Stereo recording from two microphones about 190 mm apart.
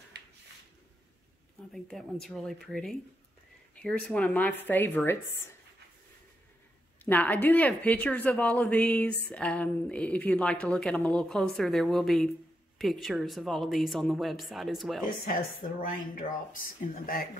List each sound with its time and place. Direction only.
1.7 s a woman's voice: centre (ahead or behind)
7.1 s a woman's voice: 10° left (ahead or behind)
15.8 s speech: 45° left (ahead or behind)